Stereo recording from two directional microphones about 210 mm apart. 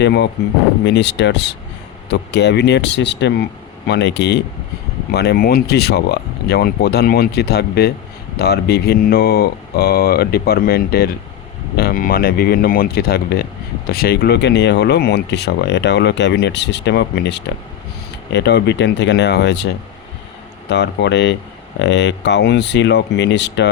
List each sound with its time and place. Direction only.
0.0 s speech: 55° left (ahead or behind)
20.7 s speech: 55° left (ahead or behind)